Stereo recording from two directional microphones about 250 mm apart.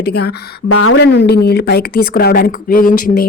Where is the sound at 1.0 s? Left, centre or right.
Left.